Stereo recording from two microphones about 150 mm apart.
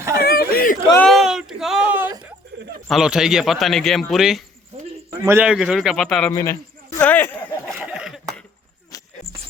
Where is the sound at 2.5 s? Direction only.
90° right.